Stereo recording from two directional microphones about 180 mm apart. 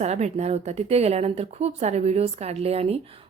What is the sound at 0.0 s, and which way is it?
A woman's voice, 40° right (ahead or behind).